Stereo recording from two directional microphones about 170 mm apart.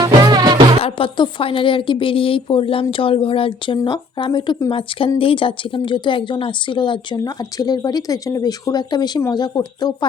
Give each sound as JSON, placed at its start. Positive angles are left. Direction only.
{"t": 0.0, "sound": "music", "side_deg": -25}
{"t": 0.8, "sound": "a woman's voice", "side_deg": 30}